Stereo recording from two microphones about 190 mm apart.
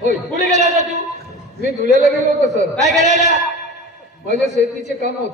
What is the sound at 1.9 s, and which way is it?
A man's voice, 40° right (ahead or behind).